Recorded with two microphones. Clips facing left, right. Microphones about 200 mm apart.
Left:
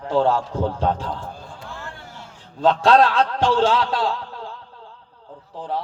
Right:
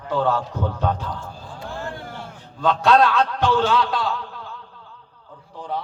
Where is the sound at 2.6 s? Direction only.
30° left (ahead or behind).